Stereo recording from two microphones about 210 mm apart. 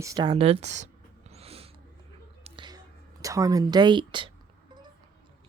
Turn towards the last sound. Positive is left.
turn(degrees=-20)  # may be behind; listen again after turning